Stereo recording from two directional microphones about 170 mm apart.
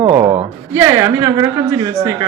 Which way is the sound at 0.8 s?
15° right (ahead or behind).